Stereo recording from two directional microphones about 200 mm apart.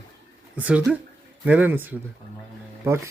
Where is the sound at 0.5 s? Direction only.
5° right (ahead or behind).